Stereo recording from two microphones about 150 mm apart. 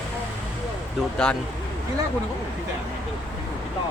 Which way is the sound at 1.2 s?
5° left (ahead or behind).